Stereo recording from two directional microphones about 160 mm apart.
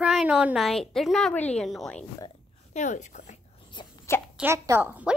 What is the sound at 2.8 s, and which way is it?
Speech, 50° left (ahead or behind).